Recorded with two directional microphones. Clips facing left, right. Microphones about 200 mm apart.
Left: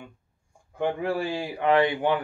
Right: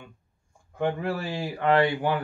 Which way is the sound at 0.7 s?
15° left (ahead or behind).